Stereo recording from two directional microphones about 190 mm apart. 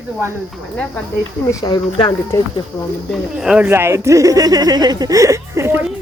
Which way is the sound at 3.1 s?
5° right (ahead or behind).